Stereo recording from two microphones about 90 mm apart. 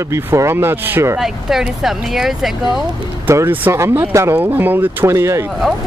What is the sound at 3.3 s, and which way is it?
Speech, 30° right (ahead or behind).